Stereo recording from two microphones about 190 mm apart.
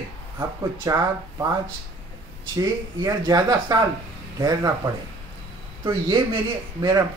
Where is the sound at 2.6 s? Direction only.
20° right (ahead or behind).